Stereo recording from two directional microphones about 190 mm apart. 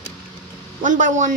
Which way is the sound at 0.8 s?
45° right (ahead or behind).